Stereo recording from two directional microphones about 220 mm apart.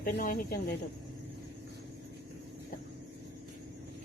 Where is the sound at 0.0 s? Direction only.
40° left (ahead or behind).